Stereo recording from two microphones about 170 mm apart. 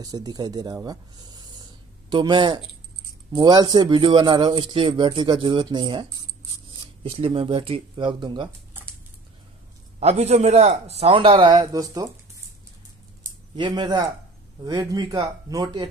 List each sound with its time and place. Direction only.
0.0 s speech: 20° right (ahead or behind)
9.9 s a man's voice: 40° right (ahead or behind); by 12.1 s 20° right (ahead or behind)
13.6 s speech: 25° right (ahead or behind)